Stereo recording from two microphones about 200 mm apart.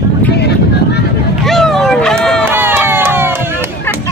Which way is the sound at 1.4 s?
Centre (ahead or behind).